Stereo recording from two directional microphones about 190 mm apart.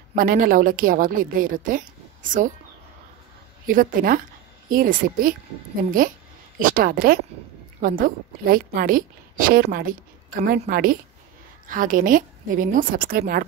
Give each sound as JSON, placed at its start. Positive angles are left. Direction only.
{"t": 0.1, "sound": "a woman's voice", "side_deg": -45}
{"t": 3.6, "sound": "a woman's voice", "side_deg": -45}